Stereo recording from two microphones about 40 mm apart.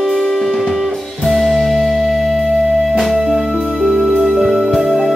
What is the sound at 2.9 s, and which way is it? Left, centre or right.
Music, centre.